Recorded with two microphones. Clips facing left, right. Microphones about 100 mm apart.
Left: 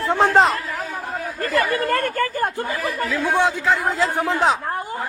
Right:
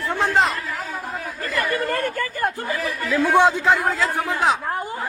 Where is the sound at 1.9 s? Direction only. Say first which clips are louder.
Left 2 dB; 65° left (ahead or behind).